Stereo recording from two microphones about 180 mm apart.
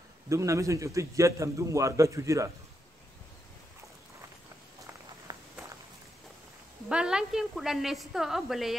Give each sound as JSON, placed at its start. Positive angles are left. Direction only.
{"t": 0.3, "sound": "a man's voice", "side_deg": -15}
{"t": 5.3, "sound": "walk", "side_deg": -25}
{"t": 6.9, "sound": "a woman's voice", "side_deg": -5}